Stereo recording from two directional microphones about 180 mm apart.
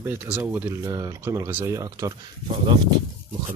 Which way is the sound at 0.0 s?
10° right (ahead or behind).